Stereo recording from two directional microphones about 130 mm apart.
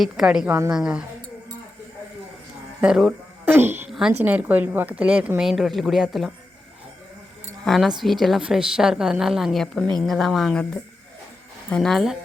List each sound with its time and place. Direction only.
0.0 s a woman's voice: 5° right (ahead or behind)
0.4 s a woman's voice: 20° right (ahead or behind)
0.7 s a woman's voice: 5° right (ahead or behind)
2.8 s a woman's voice: 5° right (ahead or behind)
7.6 s a woman's voice: centre (ahead or behind)
11.7 s a woman's voice: 5° left (ahead or behind)